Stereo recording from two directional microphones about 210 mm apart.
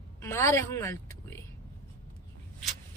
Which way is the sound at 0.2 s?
10° left (ahead or behind).